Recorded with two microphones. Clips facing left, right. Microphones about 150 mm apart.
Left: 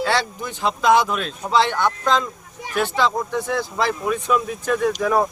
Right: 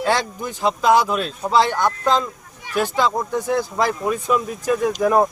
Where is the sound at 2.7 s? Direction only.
10° right (ahead or behind).